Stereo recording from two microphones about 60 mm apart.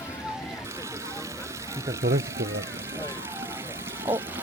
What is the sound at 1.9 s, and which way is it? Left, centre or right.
Speech, right.